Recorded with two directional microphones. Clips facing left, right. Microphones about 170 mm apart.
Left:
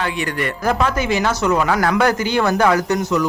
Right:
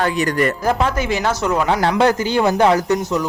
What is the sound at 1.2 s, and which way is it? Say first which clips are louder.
Speech: even; 30° right (ahead or behind).